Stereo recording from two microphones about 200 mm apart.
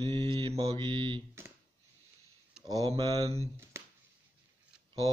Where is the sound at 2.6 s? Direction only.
20° right (ahead or behind).